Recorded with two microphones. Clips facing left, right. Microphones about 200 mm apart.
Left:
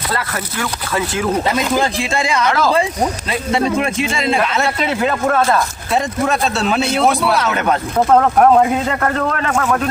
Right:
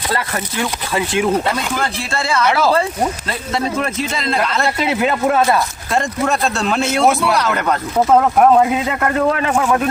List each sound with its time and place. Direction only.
0.2 s speech: 20° right (ahead or behind)
2.0 s a man's voice: 15° left (ahead or behind)
4.9 s speech: 15° right (ahead or behind)
5.9 s speech: 5° left (ahead or behind)